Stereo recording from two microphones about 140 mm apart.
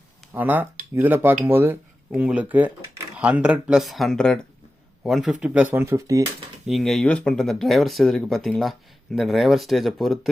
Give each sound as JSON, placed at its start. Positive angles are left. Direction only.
{"t": 0.3, "sound": "speech", "side_deg": -15}
{"t": 5.7, "sound": "speech", "side_deg": -20}
{"t": 6.7, "sound": "speech", "side_deg": 0}